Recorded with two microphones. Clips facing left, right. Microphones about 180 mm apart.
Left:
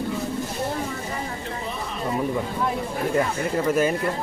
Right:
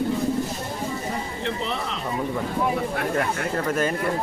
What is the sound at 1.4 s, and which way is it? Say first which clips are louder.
Speech: right 3 dB; 80° right.